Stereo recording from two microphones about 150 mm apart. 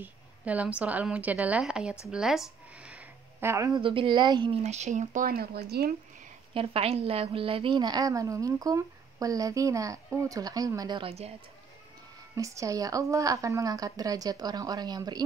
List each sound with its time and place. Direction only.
0.0 s a woman's voice: 10° right (ahead or behind)
3.3 s a woman's voice: 20° right (ahead or behind)
3.8 s a woman's voice: 35° right (ahead or behind)
4.6 s speech: 50° right (ahead or behind); by 5.9 s 90° right
6.5 s a woman's voice: 40° right (ahead or behind)
12.4 s a woman's voice: 20° right (ahead or behind)